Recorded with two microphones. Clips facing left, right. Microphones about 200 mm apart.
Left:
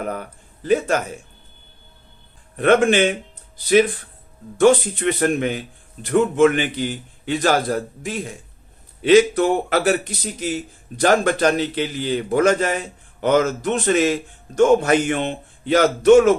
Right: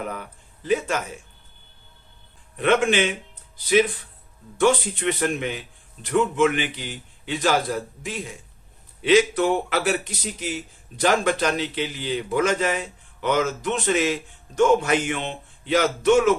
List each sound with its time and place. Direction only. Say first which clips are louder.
0.0 s a man's voice: left 4 dB; 45° left (ahead or behind)
2.6 s a man's voice: left 5 dB; 45° left (ahead or behind)
4.6 s a man's voice: left 5 dB; 40° left (ahead or behind)